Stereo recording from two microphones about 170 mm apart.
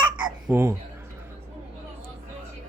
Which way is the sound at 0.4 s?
15° right (ahead or behind).